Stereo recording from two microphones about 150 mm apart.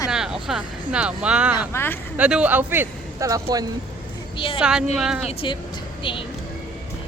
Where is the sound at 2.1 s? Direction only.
10° right (ahead or behind); by 3.6 s 25° right (ahead or behind).